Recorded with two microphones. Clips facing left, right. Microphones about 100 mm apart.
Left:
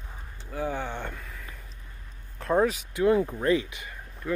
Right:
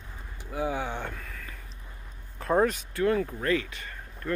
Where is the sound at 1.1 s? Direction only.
5° left (ahead or behind).